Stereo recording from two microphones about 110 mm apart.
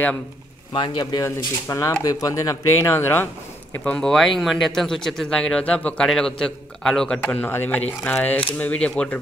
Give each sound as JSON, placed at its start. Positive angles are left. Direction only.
{"t": 0.7, "sound": "speech", "side_deg": 45}
{"t": 1.2, "sound": "speech", "side_deg": 30}
{"t": 3.8, "sound": "a man's voice", "side_deg": 5}
{"t": 7.2, "sound": "speech", "side_deg": 20}